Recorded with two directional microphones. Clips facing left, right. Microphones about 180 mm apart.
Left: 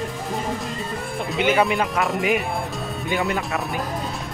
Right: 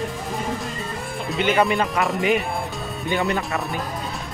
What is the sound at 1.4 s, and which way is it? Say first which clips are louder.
Speech: even; 5° left (ahead or behind).